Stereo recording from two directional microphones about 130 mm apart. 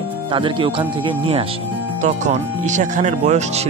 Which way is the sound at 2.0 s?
65° right (ahead or behind).